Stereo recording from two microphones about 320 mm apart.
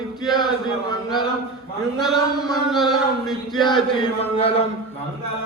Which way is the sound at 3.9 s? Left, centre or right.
Centre.